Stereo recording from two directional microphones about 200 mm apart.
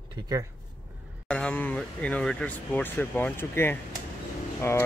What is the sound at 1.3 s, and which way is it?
Speech, 5° left (ahead or behind).